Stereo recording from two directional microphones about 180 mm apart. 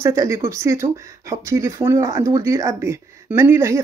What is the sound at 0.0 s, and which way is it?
Speech, 15° right (ahead or behind).